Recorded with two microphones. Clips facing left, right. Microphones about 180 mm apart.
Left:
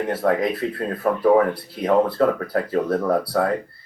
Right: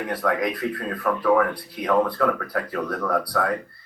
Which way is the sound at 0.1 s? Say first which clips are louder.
Left 3 dB; 25° left (ahead or behind).